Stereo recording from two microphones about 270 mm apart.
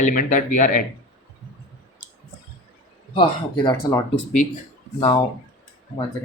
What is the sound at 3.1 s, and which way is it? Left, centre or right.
Speech, centre.